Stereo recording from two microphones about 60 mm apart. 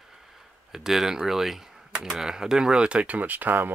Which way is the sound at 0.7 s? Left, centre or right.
Centre.